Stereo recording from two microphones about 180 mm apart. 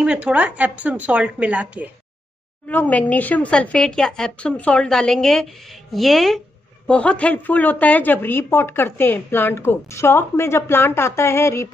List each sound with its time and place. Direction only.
0.0 s a woman's voice: 5° right (ahead or behind)
2.7 s a woman's voice: 10° left (ahead or behind)